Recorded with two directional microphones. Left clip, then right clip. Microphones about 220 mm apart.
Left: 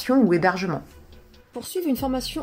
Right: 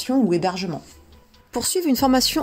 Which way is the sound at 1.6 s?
45° right (ahead or behind).